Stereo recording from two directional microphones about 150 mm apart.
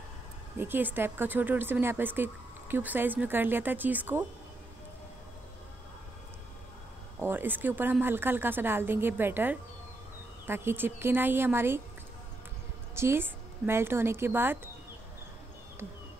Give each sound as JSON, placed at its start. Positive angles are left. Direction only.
{"t": 0.6, "sound": "speech", "side_deg": -15}
{"t": 7.2, "sound": "speech", "side_deg": -15}
{"t": 12.9, "sound": "speech", "side_deg": -15}